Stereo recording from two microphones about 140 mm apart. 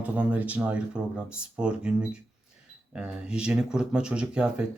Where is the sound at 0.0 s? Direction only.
10° right (ahead or behind).